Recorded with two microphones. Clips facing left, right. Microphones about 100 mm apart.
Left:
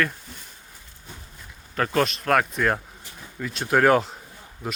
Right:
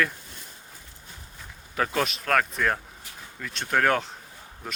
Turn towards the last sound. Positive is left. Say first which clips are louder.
# left 5 dB
turn(degrees=5)  # may be behind; listen again after turning